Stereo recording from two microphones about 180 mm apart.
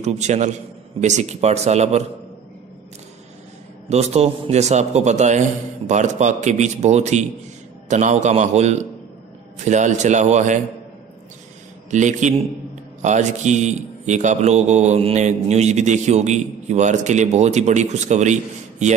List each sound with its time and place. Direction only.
0.0 s a man's voice: 40° right (ahead or behind)
3.9 s a man's voice: 35° right (ahead or behind)
11.9 s a man's voice: 40° right (ahead or behind)